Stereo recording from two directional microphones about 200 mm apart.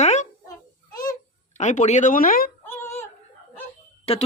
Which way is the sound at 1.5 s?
35° left (ahead or behind).